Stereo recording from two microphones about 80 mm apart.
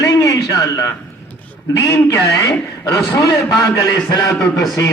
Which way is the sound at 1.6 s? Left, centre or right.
Left.